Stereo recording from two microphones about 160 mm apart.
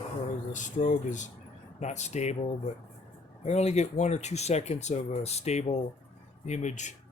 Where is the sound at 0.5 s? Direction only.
55° left (ahead or behind).